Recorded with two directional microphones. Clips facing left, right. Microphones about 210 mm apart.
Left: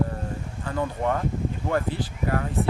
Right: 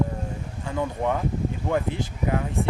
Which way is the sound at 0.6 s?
15° right (ahead or behind).